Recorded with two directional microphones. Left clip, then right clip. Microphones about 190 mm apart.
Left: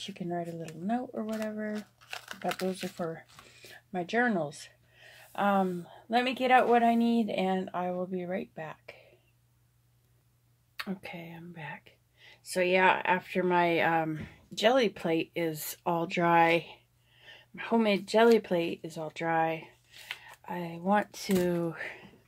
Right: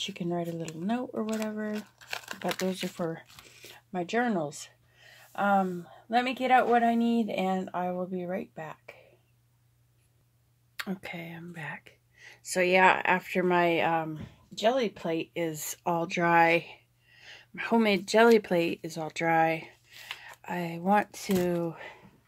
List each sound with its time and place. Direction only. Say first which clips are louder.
0.0 s speech: right 3 dB; 20° right (ahead or behind); by 9.0 s 5° right (ahead or behind)
10.8 s speech: right 2 dB; 15° right (ahead or behind)
13.8 s speech: even; 5° left (ahead or behind)
14.1 s speech: left 2 dB; 25° left (ahead or behind)
15.3 s speech: even; 5° right (ahead or behind)
17.3 s speech: right 2 dB; 15° right (ahead or behind)
21.3 s speech: right 1 dB; centre (ahead or behind)